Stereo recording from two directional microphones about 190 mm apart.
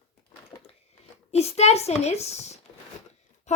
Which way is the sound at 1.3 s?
35° left (ahead or behind).